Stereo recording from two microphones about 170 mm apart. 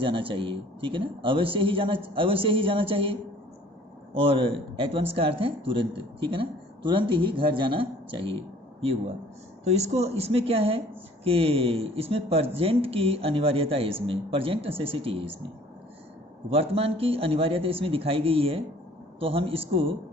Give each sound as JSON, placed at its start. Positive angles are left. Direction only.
{"t": 0.0, "sound": "speech", "side_deg": -30}
{"t": 9.6, "sound": "speech", "side_deg": -40}
{"t": 16.5, "sound": "speech", "side_deg": -35}